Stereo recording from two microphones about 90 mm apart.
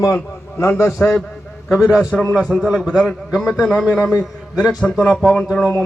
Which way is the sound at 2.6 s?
15° right (ahead or behind).